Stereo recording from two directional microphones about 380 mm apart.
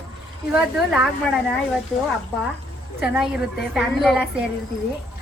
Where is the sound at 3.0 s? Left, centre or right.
Centre.